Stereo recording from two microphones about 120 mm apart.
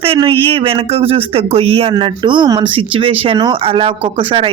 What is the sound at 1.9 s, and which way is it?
Speech, 45° right (ahead or behind).